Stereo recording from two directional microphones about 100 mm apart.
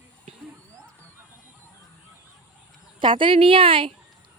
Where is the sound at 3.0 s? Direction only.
55° right (ahead or behind).